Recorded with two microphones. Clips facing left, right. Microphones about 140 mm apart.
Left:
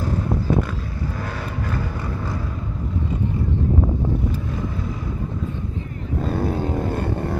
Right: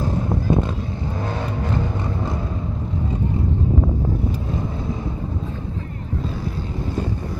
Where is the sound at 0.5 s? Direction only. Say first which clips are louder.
Right 2 dB; 25° right (ahead or behind).